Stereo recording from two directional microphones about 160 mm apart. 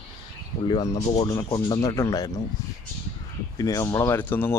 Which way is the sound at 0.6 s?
25° left (ahead or behind).